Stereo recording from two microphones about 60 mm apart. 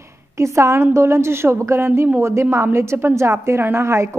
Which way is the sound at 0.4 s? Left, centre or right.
Right.